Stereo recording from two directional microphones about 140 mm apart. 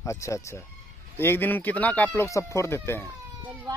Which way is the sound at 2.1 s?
20° left (ahead or behind).